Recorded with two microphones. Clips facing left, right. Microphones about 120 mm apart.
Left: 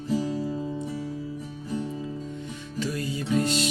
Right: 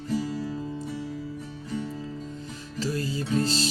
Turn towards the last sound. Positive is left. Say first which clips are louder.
# left 1 dB
turn(degrees=-30)  # may be behind; listen again after turning